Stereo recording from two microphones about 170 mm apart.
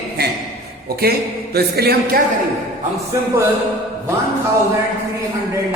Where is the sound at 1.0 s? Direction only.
65° right (ahead or behind).